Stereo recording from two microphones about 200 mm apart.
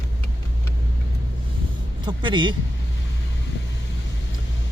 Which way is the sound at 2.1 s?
25° right (ahead or behind).